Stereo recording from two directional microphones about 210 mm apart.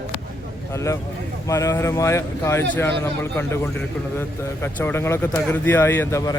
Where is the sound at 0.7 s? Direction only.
15° left (ahead or behind).